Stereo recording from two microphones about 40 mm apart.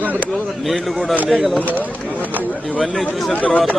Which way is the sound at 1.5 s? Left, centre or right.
Left.